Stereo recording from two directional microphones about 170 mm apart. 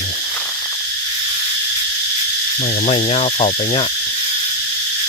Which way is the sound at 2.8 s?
40° left (ahead or behind).